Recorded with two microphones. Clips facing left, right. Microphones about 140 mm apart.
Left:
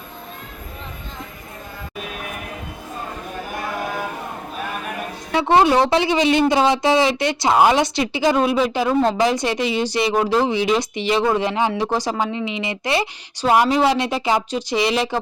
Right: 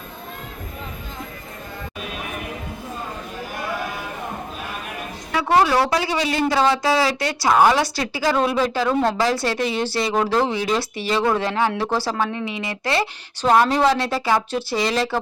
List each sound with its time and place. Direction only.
5.3 s speech: 25° left (ahead or behind)
9.6 s speech: 50° right (ahead or behind)
9.8 s speech: 15° left (ahead or behind)